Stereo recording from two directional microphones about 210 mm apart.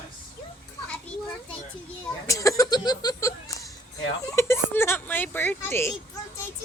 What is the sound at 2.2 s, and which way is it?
Speech, 15° left (ahead or behind).